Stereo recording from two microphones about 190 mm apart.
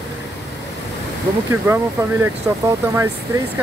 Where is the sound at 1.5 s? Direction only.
15° right (ahead or behind).